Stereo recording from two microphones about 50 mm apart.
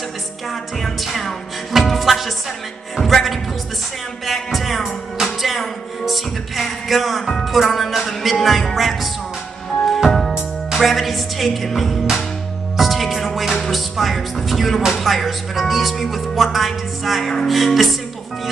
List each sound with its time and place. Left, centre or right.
0.5 s music: centre
15.0 s a woman's voice: centre